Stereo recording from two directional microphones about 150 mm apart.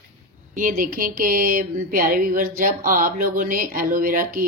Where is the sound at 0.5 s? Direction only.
65° right (ahead or behind).